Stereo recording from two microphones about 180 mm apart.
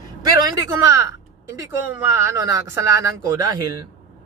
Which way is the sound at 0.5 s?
15° right (ahead or behind).